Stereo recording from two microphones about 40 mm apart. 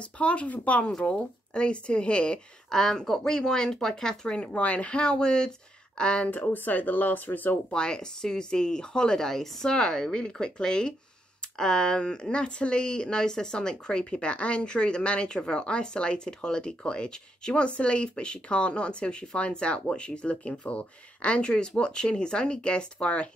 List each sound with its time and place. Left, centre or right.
0.0 s speech: left
1.1 s speech: left
2.7 s speech: centre
6.5 s speech: left
7.7 s speech: left
9.3 s speech: centre; by 23.3 s left